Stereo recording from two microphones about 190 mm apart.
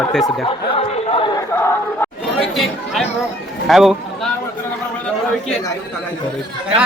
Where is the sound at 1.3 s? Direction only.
15° left (ahead or behind).